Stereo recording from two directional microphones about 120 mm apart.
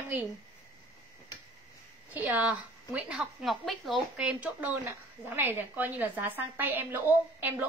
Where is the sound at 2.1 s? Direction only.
10° right (ahead or behind).